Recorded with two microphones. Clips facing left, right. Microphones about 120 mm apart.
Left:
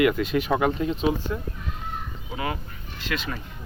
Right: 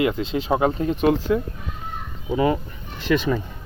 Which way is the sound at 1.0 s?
75° right (ahead or behind).